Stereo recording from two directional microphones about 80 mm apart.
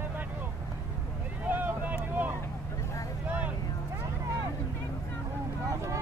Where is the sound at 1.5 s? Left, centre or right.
Right.